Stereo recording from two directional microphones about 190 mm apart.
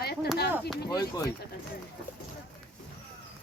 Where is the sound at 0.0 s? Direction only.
55° left (ahead or behind).